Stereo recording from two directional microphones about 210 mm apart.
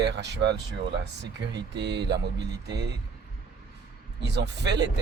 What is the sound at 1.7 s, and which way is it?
Speech, 55° right (ahead or behind).